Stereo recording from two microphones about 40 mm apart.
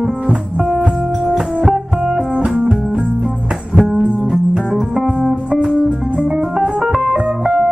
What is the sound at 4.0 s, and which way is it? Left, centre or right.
Music, right.